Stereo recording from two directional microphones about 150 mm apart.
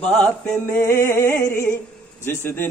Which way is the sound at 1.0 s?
15° left (ahead or behind).